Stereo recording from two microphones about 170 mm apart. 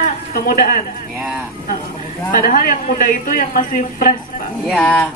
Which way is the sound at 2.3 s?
55° left (ahead or behind).